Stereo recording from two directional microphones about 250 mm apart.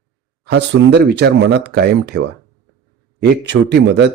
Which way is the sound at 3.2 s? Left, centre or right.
Right.